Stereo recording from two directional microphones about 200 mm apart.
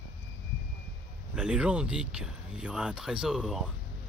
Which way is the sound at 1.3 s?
5° right (ahead or behind).